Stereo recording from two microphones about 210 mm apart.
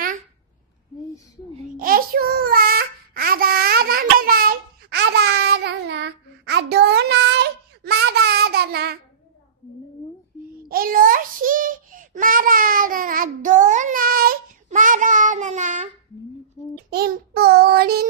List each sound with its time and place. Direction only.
1.8 s child singing: 45° right (ahead or behind)
10.7 s child singing: 45° right (ahead or behind)
16.9 s child singing: 50° right (ahead or behind)